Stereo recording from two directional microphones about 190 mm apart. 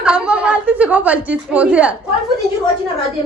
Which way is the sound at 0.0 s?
5° right (ahead or behind).